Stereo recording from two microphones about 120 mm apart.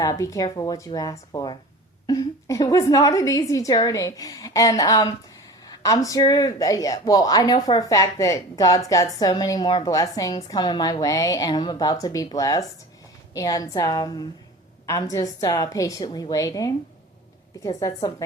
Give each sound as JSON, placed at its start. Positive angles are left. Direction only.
{"t": 0.0, "sound": "a woman's voice", "side_deg": 25}